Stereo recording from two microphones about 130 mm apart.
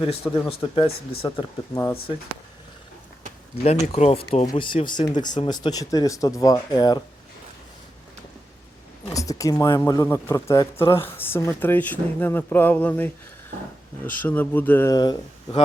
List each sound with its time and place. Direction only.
0.0 s speech: 45° left (ahead or behind)
1.7 s speech: 25° left (ahead or behind)
3.9 s speech: 50° left (ahead or behind); by 7.0 s 35° left (ahead or behind)
9.1 s speech: 25° left (ahead or behind)
14.8 s speech: 30° left (ahead or behind)